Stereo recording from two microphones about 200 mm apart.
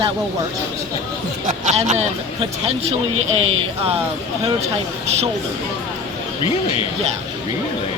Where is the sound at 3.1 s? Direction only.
85° right.